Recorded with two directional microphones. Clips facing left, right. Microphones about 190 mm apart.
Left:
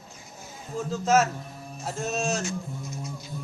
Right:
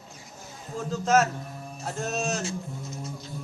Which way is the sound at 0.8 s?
Centre (ahead or behind).